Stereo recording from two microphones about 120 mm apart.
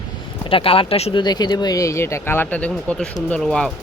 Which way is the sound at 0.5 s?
50° left (ahead or behind).